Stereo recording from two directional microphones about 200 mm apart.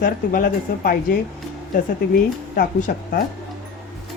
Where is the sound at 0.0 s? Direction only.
45° left (ahead or behind).